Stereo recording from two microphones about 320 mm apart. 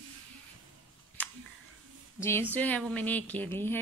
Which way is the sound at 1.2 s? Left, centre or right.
Centre.